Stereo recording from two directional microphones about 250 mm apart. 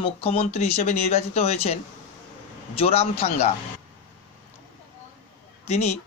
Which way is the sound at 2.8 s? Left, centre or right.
Left.